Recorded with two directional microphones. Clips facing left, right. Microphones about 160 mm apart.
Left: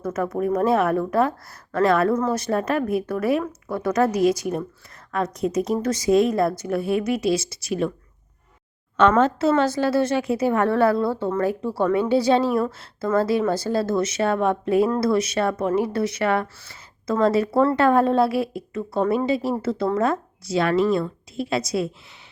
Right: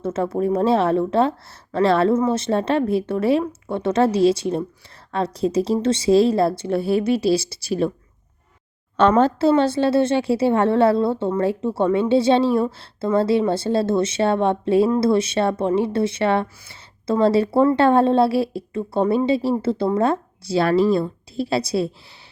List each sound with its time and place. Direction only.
0.0 s a woman's voice: 25° right (ahead or behind)
9.0 s a woman's voice: 35° right (ahead or behind)